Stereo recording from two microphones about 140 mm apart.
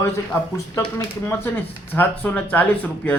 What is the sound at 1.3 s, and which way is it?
Speech, 15° left (ahead or behind).